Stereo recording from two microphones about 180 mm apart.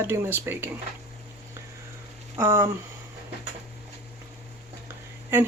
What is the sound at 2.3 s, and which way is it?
Speech, 15° right (ahead or behind).